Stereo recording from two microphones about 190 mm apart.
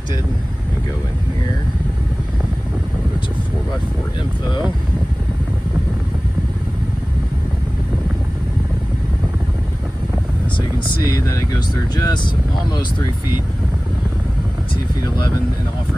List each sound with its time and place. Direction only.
11.1 s vehicle: 20° left (ahead or behind)